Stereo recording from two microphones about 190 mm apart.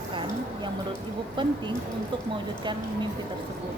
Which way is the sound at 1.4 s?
25° right (ahead or behind).